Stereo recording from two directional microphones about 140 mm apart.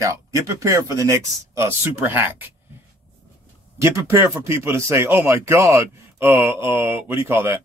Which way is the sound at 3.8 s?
20° right (ahead or behind).